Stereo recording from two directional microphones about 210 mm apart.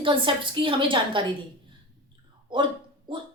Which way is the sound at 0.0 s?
25° right (ahead or behind).